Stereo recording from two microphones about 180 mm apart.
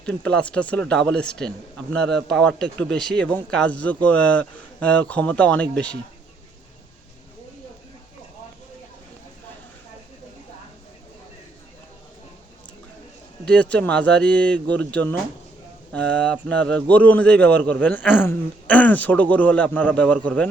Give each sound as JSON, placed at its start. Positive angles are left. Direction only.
{"t": 0.0, "sound": "speech", "side_deg": 5}
{"t": 13.4, "sound": "speech", "side_deg": 5}
{"t": 15.9, "sound": "speech", "side_deg": 5}